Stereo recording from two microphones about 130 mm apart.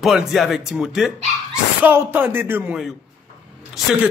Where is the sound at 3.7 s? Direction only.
Centre (ahead or behind).